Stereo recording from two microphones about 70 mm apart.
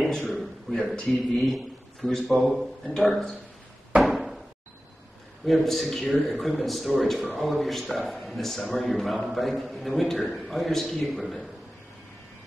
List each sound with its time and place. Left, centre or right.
0.3 s a man's voice: centre
4.0 s door: centre
5.4 s a man's voice: centre